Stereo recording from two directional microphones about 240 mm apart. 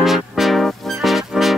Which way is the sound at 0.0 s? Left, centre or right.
Centre.